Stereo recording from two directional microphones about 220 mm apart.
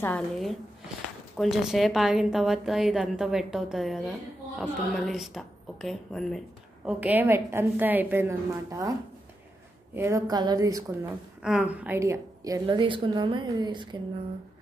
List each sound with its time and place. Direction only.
0.0 s a woman's voice: 5° left (ahead or behind); by 8.9 s 15° right (ahead or behind)
9.9 s a woman's voice: 10° right (ahead or behind)
11.4 s a woman's voice: 5° right (ahead or behind); by 13.8 s 20° right (ahead or behind)